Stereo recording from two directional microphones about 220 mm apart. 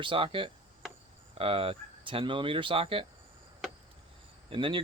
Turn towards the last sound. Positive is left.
turn(degrees=-25)  # may be behind; listen again after turning